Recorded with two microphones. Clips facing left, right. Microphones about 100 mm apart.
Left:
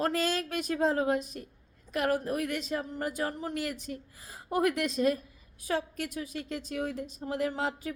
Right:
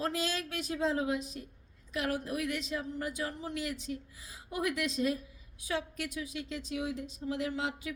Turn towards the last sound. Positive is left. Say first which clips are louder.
# left 4 dB
turn(degrees=45)  # may be behind; listen again after turning